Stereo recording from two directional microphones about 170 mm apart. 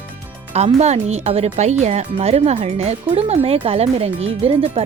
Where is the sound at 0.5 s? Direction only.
40° right (ahead or behind).